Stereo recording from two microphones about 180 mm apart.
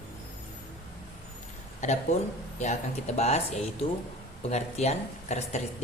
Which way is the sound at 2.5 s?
40° left (ahead or behind).